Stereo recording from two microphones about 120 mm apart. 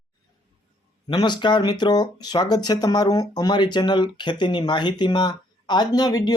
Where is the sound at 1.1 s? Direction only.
40° left (ahead or behind).